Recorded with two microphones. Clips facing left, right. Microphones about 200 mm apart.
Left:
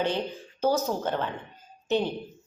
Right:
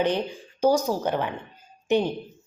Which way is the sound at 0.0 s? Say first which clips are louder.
Right 4 dB; 15° right (ahead or behind).